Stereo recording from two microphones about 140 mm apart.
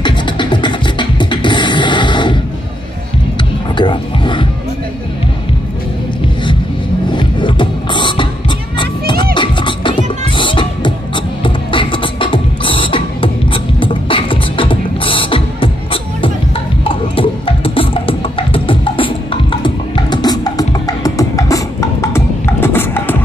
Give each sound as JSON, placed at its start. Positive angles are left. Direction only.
{"t": 0.0, "sound": "beatboxing", "side_deg": 35}
{"t": 3.7, "sound": "music", "side_deg": 35}
{"t": 7.1, "sound": "music", "side_deg": 35}
{"t": 11.4, "sound": "beatboxing", "side_deg": 35}
{"t": 16.8, "sound": "music", "side_deg": 40}